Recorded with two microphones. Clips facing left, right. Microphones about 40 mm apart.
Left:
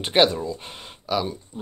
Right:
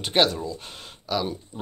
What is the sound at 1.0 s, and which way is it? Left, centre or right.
Speech, centre.